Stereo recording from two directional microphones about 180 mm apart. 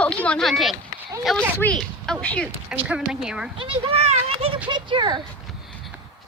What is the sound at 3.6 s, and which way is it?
A child's voice, 30° right (ahead or behind).